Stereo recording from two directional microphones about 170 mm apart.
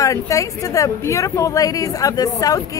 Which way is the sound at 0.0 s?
20° left (ahead or behind).